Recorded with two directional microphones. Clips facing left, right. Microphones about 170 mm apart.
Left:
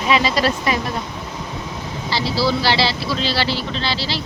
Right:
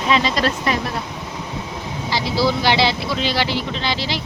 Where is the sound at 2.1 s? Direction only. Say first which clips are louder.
Even; 20° right (ahead or behind).